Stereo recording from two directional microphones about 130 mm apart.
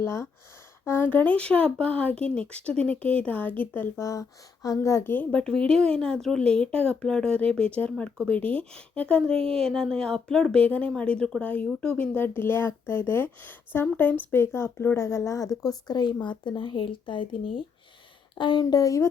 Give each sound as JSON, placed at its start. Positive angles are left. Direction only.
{"t": 0.0, "sound": "a woman's voice", "side_deg": 20}